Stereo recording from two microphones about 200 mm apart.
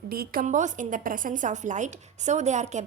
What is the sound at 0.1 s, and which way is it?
A woman's voice, 50° right (ahead or behind).